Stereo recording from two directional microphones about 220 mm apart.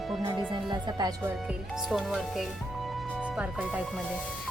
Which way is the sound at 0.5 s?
20° right (ahead or behind).